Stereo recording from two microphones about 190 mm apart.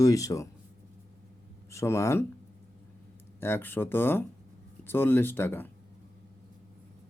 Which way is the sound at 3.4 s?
15° left (ahead or behind).